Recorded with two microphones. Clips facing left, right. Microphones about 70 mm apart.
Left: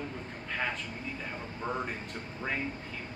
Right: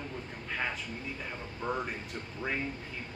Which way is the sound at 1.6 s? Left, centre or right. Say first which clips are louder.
Right 1 dB; left.